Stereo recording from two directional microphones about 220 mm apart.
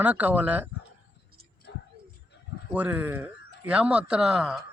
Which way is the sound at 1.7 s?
50° left (ahead or behind).